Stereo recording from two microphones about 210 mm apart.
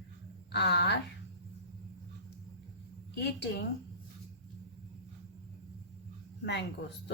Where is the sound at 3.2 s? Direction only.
55° left (ahead or behind).